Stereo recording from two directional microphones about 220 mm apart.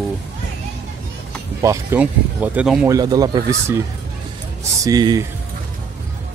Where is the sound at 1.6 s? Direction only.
10° right (ahead or behind).